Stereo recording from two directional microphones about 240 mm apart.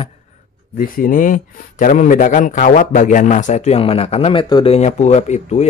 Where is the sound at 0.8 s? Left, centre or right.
Left.